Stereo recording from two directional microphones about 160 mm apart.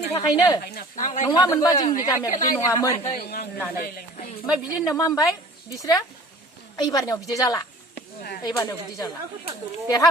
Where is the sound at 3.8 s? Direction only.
55° left (ahead or behind).